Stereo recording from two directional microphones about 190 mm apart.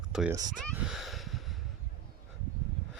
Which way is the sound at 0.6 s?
Centre (ahead or behind).